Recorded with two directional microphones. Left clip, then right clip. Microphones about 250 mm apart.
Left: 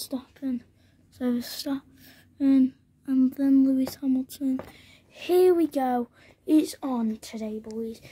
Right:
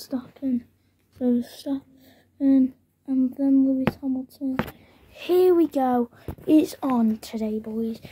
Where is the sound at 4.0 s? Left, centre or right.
Left.